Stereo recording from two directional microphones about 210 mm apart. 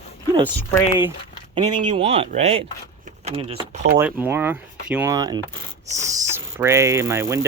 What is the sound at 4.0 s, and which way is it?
Speech, 10° right (ahead or behind).